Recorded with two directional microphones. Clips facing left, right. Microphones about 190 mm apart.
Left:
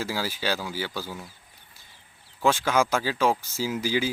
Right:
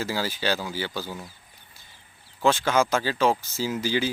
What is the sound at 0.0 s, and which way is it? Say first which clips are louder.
Speech: right 2 dB; 5° left (ahead or behind).